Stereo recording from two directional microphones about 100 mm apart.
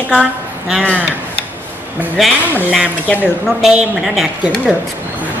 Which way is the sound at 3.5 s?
5° right (ahead or behind).